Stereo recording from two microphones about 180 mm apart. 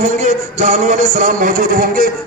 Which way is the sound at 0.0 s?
40° right (ahead or behind).